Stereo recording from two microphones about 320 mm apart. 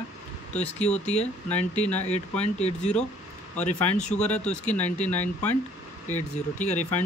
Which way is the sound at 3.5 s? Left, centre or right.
Left.